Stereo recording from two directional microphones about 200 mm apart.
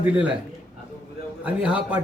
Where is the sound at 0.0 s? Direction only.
5° right (ahead or behind).